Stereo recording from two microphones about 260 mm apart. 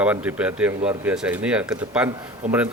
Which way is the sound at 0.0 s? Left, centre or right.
Centre.